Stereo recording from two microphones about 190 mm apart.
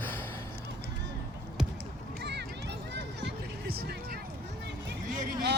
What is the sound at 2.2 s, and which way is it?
Run, 60° right (ahead or behind).